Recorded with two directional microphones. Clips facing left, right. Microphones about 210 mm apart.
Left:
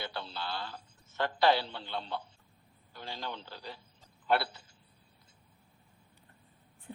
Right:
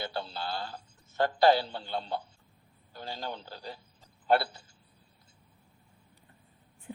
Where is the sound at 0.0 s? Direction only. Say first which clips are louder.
Right 4 dB; 40° right (ahead or behind).